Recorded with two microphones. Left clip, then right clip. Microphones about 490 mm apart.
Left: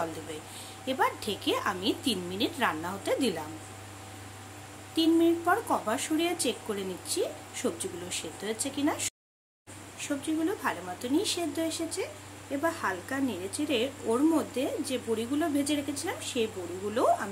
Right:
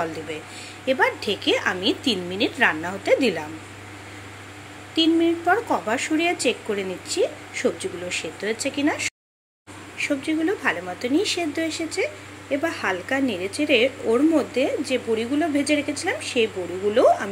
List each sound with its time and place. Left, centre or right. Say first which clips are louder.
0.8 s speech: right 8 dB; left
4.9 s speech: right 5 dB; left